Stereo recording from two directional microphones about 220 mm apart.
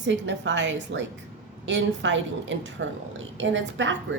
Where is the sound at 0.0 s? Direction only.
55° right (ahead or behind).